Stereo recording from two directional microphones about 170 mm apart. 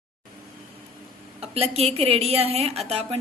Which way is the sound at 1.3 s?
35° right (ahead or behind).